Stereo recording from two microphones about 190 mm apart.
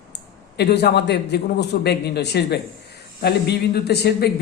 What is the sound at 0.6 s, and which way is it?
Speech, 60° left (ahead or behind).